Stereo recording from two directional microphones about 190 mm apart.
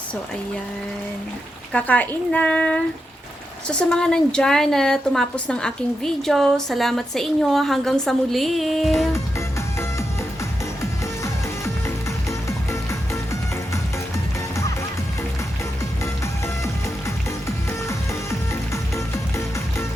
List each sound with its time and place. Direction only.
1.7 s a woman's voice: 5° left (ahead or behind)
17.8 s music: 15° left (ahead or behind)